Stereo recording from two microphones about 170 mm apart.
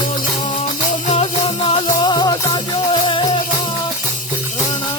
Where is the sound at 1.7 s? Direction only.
25° left (ahead or behind).